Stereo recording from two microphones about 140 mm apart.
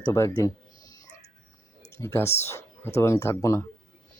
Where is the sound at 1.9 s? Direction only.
20° left (ahead or behind).